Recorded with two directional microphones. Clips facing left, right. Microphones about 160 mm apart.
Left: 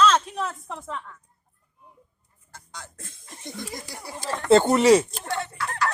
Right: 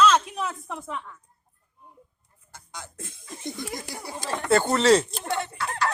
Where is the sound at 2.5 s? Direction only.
20° right (ahead or behind).